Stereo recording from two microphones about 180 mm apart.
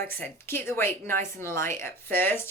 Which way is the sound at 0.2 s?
15° left (ahead or behind).